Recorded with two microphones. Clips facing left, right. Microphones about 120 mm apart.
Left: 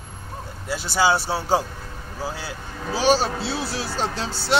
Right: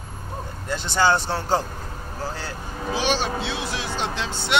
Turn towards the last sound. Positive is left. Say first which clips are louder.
# left 1 dB
turn(degrees=35)  # may be behind; listen again after turning